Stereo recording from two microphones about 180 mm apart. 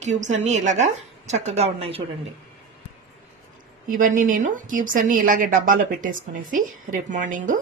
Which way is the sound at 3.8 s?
50° right (ahead or behind).